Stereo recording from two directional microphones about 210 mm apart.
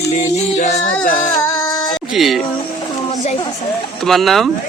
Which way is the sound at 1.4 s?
15° left (ahead or behind).